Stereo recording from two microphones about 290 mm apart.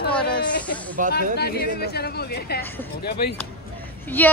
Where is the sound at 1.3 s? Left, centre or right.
Left.